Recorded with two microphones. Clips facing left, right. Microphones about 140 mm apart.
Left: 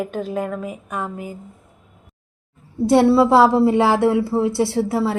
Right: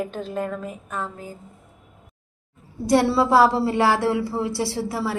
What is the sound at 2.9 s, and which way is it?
A woman's voice, 20° left (ahead or behind).